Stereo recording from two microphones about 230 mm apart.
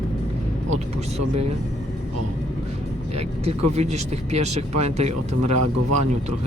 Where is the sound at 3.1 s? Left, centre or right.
Right.